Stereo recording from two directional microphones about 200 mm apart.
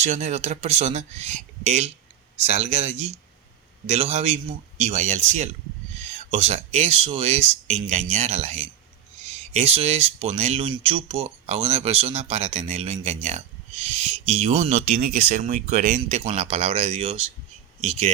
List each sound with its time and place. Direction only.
0.0 s speech: 35° right (ahead or behind)